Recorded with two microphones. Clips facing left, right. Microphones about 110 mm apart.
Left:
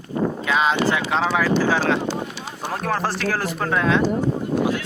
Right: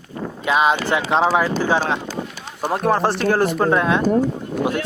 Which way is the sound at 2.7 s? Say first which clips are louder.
Right 6 dB; 20° right (ahead or behind).